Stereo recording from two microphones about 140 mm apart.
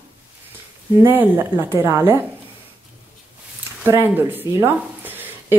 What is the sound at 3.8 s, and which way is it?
Speech, 15° right (ahead or behind).